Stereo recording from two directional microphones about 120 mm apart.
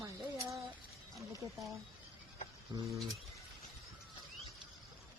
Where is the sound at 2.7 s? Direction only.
25° right (ahead or behind).